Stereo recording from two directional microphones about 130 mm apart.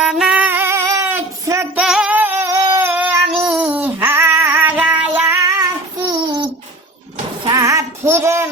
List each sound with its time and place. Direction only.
0.0 s female singing: 5° right (ahead or behind)
1.7 s music: 5° right (ahead or behind); by 2.6 s 20° right (ahead or behind)
2.7 s child singing: 15° right (ahead or behind)
5.5 s child singing: 30° right (ahead or behind)
7.4 s a sound: 25° right (ahead or behind)